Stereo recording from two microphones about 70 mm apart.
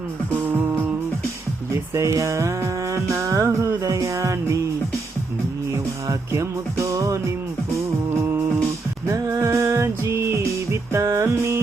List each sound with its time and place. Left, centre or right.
0.4 s music: right
1.7 s music: right
6.1 s music: right
8.1 s music: right
9.1 s music: right